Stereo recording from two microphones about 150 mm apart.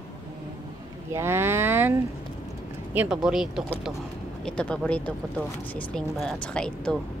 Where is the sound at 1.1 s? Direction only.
15° right (ahead or behind).